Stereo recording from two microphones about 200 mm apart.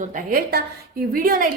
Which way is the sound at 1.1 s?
45° right (ahead or behind).